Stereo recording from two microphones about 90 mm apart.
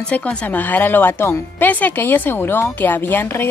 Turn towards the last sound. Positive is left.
turn(degrees=25)  # may be behind; listen again after turning